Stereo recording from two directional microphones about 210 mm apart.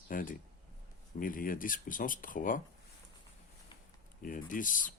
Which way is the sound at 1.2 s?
40° left (ahead or behind).